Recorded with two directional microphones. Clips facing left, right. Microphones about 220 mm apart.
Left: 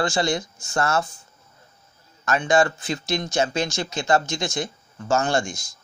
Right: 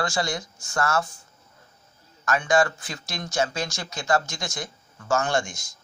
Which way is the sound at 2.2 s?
25° left (ahead or behind).